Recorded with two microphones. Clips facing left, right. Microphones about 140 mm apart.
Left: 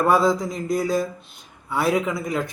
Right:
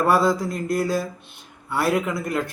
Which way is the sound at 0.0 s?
Centre (ahead or behind).